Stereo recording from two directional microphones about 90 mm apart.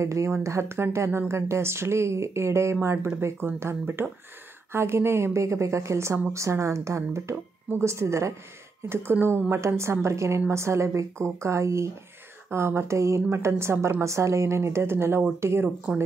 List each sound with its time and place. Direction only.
0.0 s a woman's voice: 35° right (ahead or behind)